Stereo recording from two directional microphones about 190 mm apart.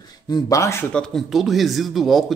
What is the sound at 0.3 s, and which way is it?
A man's voice, 15° left (ahead or behind).